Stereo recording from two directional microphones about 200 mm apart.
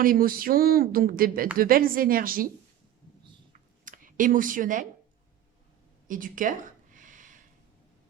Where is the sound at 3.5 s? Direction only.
40° right (ahead or behind).